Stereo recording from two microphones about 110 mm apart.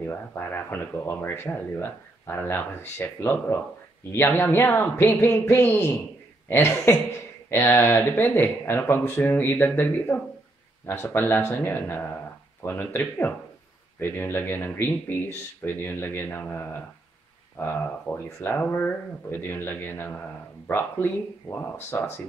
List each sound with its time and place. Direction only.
0.0 s speech: 20° left (ahead or behind)